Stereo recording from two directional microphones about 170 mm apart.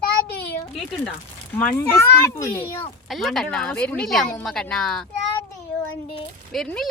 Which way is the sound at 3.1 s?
Centre (ahead or behind).